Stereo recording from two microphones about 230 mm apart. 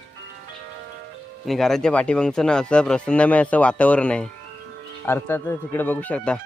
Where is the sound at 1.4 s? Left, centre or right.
Centre.